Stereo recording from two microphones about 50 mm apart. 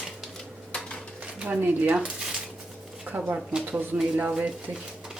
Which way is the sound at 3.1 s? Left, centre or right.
Right.